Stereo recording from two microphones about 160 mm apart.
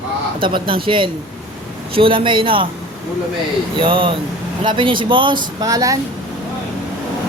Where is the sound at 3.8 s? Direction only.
35° right (ahead or behind).